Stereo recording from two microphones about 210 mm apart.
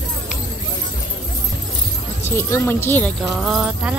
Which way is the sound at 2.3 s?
10° left (ahead or behind).